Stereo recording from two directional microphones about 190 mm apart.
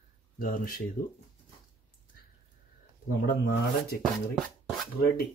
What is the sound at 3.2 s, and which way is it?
Speech, 50° left (ahead or behind).